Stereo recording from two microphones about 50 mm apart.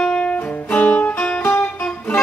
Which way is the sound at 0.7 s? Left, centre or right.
Left.